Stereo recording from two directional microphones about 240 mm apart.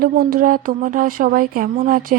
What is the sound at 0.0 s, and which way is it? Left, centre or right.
Speech, right.